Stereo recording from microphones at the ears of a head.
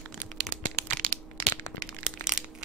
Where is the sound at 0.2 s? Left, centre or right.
Right.